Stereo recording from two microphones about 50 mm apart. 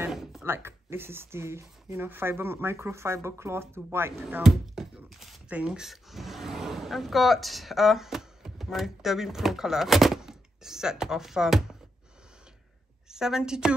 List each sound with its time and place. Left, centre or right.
0.1 s a sound: centre
0.5 s speech: right
2.0 s speech: right
4.4 s a sound: centre
5.9 s speech: centre
13.1 s a woman's voice: centre